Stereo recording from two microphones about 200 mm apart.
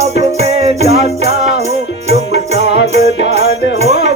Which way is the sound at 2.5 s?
60° left (ahead or behind).